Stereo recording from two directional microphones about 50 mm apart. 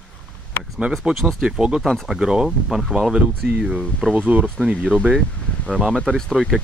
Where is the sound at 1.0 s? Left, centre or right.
Centre.